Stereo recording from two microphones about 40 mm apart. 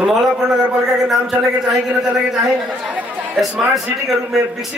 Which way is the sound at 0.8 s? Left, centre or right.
Centre.